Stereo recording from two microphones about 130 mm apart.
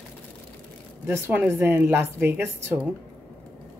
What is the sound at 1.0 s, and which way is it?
A woman's voice, 20° right (ahead or behind).